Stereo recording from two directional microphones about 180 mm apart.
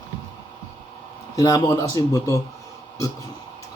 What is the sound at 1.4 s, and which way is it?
Speech, 20° left (ahead or behind).